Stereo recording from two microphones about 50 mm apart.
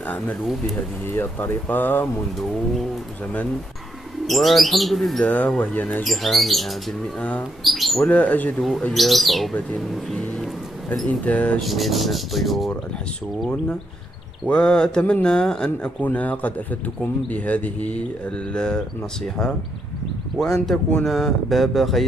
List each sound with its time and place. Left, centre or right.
0.7 s speech: left
4.3 s speech: centre
5.2 s speech: left
6.0 s speech: centre
7.2 s speech: left
7.6 s speech: centre
8.0 s speech: left
8.9 s speech: centre
11.1 s speech: left
11.6 s speech: centre
14.5 s speech: centre
16.0 s speech: left
18.5 s speech: centre